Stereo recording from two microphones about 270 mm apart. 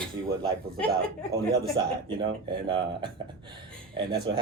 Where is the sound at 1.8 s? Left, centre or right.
Centre.